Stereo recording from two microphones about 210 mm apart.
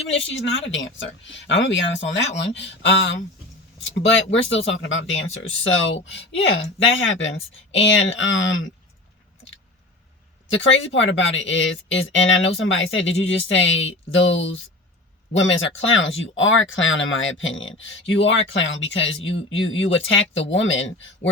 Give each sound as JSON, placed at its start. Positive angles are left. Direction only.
{"t": 0.1, "sound": "speech", "side_deg": 60}
{"t": 10.5, "sound": "speech", "side_deg": 65}
{"t": 15.4, "sound": "speech", "side_deg": 65}